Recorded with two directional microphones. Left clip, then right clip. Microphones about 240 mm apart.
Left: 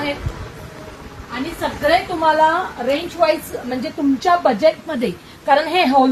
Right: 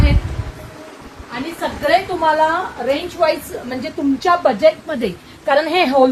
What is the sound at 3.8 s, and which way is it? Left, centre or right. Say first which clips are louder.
A woman's voice: even; centre.